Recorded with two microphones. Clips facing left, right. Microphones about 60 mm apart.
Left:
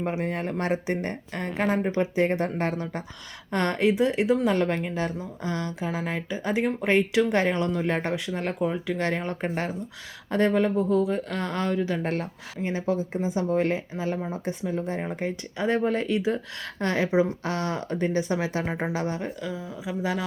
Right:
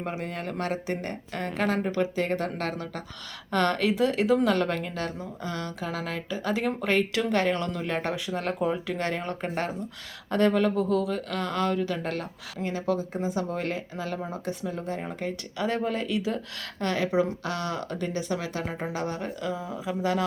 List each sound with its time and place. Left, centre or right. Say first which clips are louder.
0.0 s a woman's voice: left 4 dB; left
17.4 s a woman's voice: left 2 dB; left
19.8 s a sound: right 1 dB; centre